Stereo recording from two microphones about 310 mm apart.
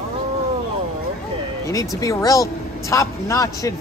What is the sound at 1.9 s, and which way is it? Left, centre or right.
Speech, centre.